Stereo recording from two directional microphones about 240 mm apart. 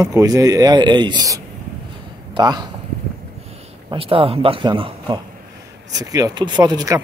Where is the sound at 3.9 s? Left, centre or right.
Right.